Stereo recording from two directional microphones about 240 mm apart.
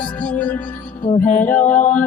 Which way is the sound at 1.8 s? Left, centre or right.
Left.